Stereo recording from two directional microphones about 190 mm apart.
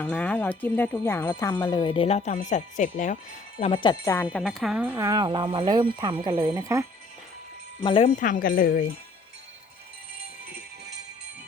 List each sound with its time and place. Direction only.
0.0 s speech: 5° left (ahead or behind); by 3.2 s 40° left (ahead or behind)
3.6 s speech: 25° left (ahead or behind); by 6.4 s 30° right (ahead or behind)
6.4 s speech: 15° right (ahead or behind)
7.9 s speech: 30° left (ahead or behind)
8.1 s speech: 45° left (ahead or behind)